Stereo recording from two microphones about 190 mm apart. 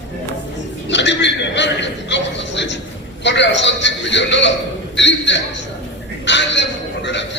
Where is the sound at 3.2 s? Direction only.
70° left (ahead or behind).